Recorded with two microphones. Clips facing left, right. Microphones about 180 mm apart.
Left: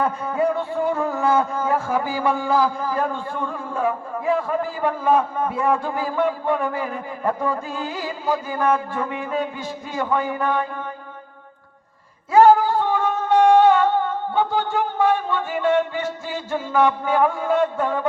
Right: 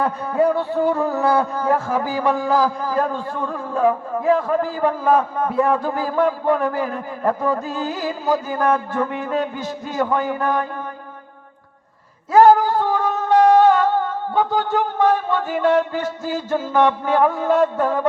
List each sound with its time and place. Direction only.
0.0 s speech: 35° right (ahead or behind)
12.3 s a sound: 40° right (ahead or behind)
14.3 s speech: 40° right (ahead or behind)